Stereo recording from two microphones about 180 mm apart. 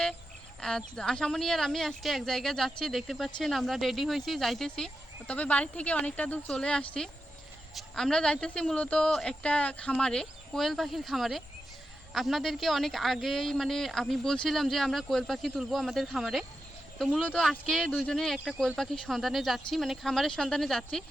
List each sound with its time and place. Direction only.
0.6 s speech: 5° left (ahead or behind)
18.3 s speech: 10° right (ahead or behind)
18.6 s speech: centre (ahead or behind)